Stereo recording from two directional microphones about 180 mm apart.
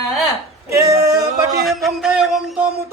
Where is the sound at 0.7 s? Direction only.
15° right (ahead or behind).